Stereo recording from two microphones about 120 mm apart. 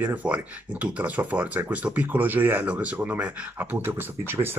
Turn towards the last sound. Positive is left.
turn(degrees=-20)  # may be behind; listen again after turning